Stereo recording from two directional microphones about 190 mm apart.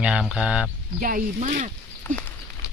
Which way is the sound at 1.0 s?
45° right (ahead or behind).